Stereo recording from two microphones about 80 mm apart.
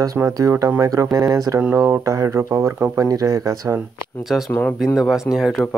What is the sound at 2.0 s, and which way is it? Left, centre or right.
Speech, right.